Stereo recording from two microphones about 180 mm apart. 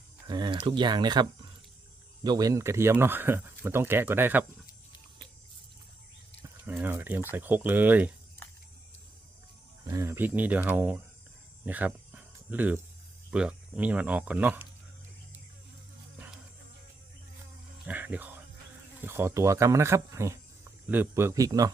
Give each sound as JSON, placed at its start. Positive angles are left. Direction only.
{"t": 0.3, "sound": "speech", "side_deg": -25}
{"t": 6.4, "sound": "speech", "side_deg": -10}
{"t": 9.8, "sound": "speech", "side_deg": -15}
{"t": 11.6, "sound": "cricket", "side_deg": -10}
{"t": 13.3, "sound": "speech", "side_deg": -5}
{"t": 17.8, "sound": "a sound", "side_deg": -10}
{"t": 19.0, "sound": "speech", "side_deg": -15}